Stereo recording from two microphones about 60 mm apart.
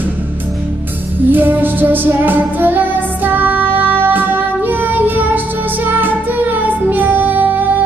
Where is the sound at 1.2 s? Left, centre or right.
Right.